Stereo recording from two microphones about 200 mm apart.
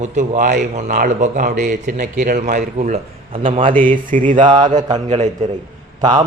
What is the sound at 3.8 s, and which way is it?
Speech, 40° right (ahead or behind).